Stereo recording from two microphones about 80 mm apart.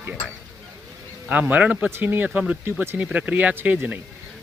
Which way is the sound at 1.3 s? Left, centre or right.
Centre.